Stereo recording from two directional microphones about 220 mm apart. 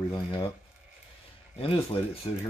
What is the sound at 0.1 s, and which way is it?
Speech, 20° left (ahead or behind).